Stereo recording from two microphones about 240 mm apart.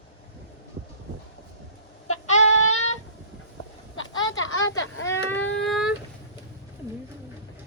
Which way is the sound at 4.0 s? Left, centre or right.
Left.